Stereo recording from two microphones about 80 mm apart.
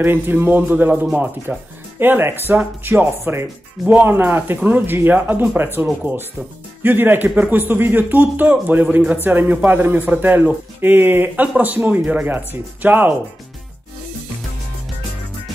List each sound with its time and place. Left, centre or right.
0.0 s a man's voice: right